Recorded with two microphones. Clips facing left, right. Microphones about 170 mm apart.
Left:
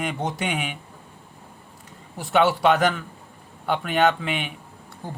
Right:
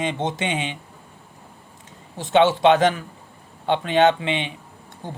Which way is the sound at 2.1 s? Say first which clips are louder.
Right 3 dB; 25° right (ahead or behind).